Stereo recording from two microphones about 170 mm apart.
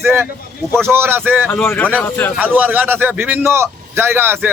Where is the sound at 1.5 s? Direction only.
10° left (ahead or behind).